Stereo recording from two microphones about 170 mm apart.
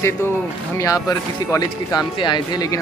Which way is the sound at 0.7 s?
20° left (ahead or behind).